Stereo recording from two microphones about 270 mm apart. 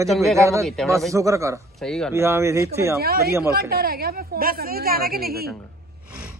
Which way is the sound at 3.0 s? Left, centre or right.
Right.